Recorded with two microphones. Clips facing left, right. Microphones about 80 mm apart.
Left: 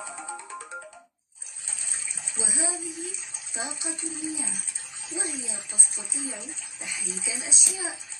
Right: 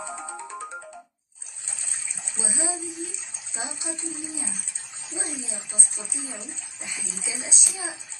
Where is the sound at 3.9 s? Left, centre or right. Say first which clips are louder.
Left 1 dB; right.